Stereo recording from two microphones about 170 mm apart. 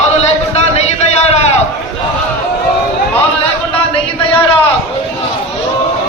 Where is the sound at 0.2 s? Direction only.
40° left (ahead or behind).